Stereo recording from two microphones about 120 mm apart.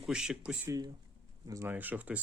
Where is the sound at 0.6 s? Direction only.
30° right (ahead or behind).